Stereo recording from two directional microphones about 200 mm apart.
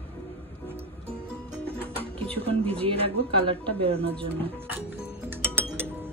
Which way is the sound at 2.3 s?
30° right (ahead or behind).